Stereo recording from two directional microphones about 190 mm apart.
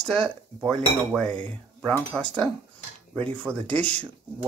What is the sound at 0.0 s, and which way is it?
Cutlery, 5° left (ahead or behind).